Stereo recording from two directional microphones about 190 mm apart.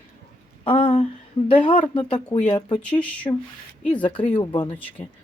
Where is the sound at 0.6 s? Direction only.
30° left (ahead or behind).